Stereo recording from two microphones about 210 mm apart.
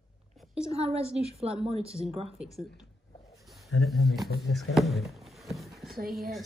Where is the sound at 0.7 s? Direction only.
30° right (ahead or behind).